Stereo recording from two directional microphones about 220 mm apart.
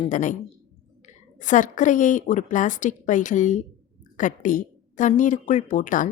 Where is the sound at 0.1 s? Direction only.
35° left (ahead or behind).